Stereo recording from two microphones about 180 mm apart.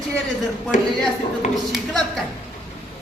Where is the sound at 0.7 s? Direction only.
45° left (ahead or behind).